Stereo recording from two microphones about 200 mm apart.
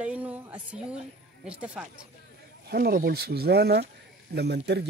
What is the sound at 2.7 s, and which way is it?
Speech, 45° right (ahead or behind).